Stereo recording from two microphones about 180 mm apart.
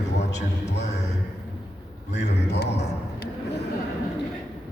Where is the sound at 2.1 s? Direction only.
70° left (ahead or behind).